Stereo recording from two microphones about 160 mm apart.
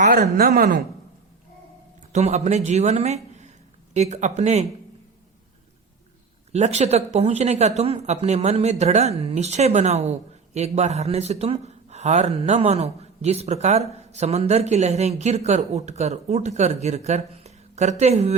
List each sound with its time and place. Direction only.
0.1 s speech: 75° right (ahead or behind)
2.1 s speech: 45° right (ahead or behind)
6.5 s speech: 45° right (ahead or behind)